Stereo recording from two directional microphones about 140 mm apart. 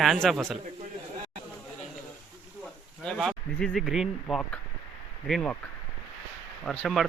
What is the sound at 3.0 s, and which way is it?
Speech, 5° left (ahead or behind).